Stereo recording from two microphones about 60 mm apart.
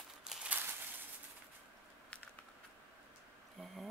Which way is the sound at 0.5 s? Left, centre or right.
Right.